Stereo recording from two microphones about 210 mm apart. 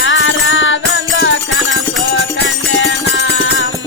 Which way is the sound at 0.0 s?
65° left (ahead or behind).